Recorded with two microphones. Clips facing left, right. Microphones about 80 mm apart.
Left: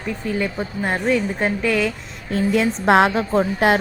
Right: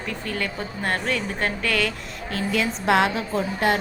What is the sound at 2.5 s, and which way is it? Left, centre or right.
Speech, left.